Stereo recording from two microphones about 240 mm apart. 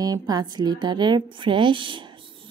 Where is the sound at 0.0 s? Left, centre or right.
Centre.